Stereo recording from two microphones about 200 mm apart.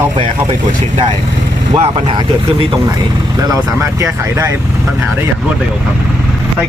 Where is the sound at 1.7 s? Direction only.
25° right (ahead or behind).